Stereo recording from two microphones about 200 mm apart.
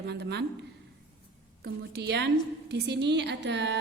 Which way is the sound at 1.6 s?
55° right (ahead or behind).